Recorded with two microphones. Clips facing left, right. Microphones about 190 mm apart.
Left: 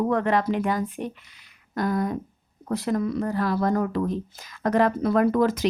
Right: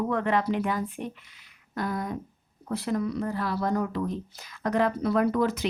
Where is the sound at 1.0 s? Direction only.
75° left (ahead or behind).